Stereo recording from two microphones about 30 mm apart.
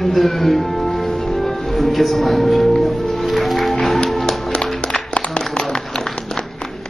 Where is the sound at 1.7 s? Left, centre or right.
Centre.